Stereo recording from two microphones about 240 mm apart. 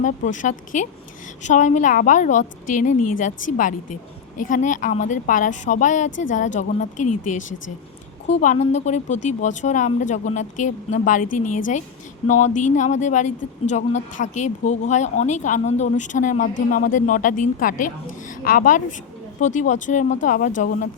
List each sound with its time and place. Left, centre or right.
0.0 s a woman's voice: left
6.1 s a woman's voice: left
6.3 s a woman's voice: left
8.3 s a woman's voice: left